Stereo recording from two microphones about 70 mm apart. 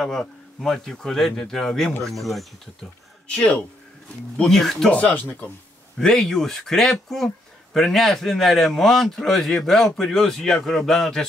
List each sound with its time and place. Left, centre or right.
0.0 s speech: centre
3.3 s speech: centre
4.4 s speech: centre
4.9 s speech: left
5.9 s speech: centre